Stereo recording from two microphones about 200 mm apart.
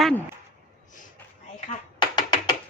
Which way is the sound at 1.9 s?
20° left (ahead or behind).